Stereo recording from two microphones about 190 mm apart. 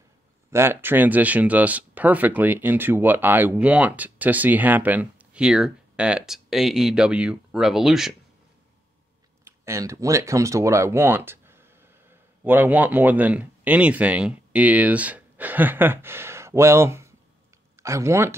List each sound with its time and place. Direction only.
0.5 s speech: 15° right (ahead or behind)
9.4 s speech: 15° right (ahead or behind)